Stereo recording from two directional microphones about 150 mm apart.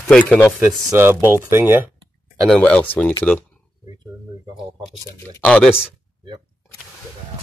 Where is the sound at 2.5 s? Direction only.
5° left (ahead or behind).